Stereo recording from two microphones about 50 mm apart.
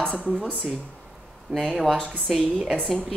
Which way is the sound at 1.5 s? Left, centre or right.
Centre.